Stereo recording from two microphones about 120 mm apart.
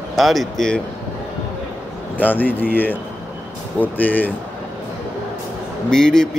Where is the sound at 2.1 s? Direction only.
15° left (ahead or behind).